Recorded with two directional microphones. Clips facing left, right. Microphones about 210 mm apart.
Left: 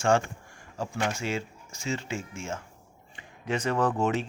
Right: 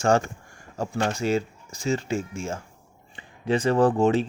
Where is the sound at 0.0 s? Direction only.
40° right (ahead or behind).